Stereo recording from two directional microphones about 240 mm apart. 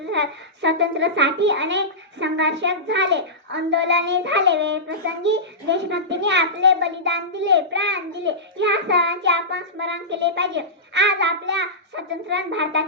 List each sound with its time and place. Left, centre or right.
0.0 s a child's voice: right